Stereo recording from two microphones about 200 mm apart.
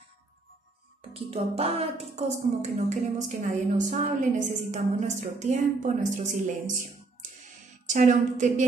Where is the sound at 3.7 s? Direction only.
40° right (ahead or behind).